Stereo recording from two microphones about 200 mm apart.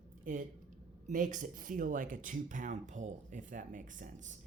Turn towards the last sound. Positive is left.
turn(degrees=-40)  # may be behind; listen again after turning